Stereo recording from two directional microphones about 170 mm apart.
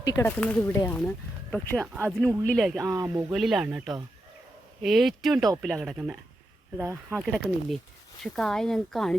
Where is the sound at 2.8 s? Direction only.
20° right (ahead or behind).